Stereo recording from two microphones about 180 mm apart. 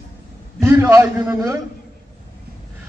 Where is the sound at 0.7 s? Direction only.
15° right (ahead or behind).